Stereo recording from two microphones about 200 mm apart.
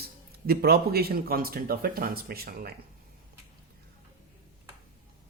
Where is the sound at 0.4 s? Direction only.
50° right (ahead or behind).